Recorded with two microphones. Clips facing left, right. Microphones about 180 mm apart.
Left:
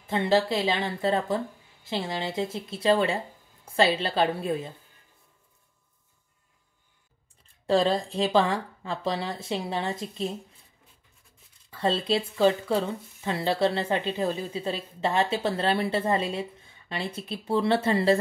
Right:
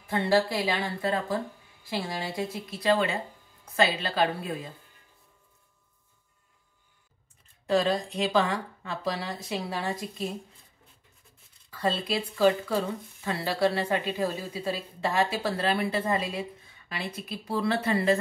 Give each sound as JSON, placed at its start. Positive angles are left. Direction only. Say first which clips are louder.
{"t": 0.0, "sound": "speech", "louder": "left 1 dB", "side_deg": 20}
{"t": 7.6, "sound": "speech", "louder": "left 2 dB", "side_deg": 30}
{"t": 11.7, "sound": "speech", "louder": "left 3 dB", "side_deg": 25}